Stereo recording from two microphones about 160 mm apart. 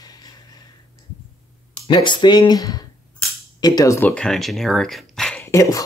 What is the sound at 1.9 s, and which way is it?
Speech, 30° left (ahead or behind).